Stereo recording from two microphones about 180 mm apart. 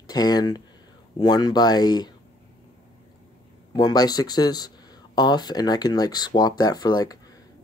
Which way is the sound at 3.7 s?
20° left (ahead or behind).